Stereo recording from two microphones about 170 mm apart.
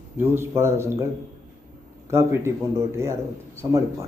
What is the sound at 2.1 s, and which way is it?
A man's voice, 15° right (ahead or behind).